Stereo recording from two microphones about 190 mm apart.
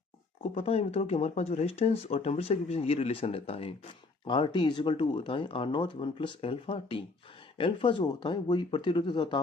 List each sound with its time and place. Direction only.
0.5 s speech: 30° left (ahead or behind)